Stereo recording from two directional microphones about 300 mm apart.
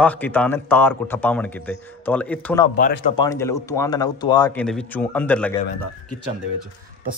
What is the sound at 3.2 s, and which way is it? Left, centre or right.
A man's voice, centre.